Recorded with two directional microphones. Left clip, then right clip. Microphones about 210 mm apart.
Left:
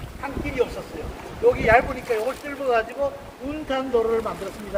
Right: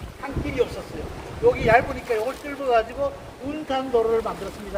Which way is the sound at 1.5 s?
10° right (ahead or behind).